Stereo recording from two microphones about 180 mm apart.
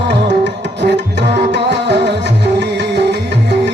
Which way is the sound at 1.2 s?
75° right (ahead or behind).